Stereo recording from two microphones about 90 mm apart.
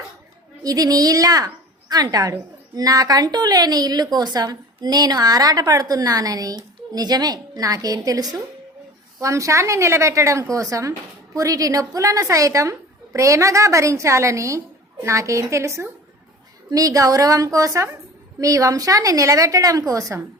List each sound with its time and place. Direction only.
0.6 s a woman's voice: 45° right (ahead or behind)